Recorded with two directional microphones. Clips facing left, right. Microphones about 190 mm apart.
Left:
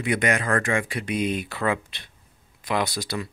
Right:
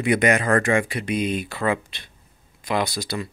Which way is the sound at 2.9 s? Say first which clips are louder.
Right 2 dB; 15° right (ahead or behind).